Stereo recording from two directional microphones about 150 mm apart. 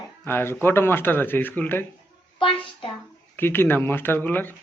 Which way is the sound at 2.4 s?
35° left (ahead or behind).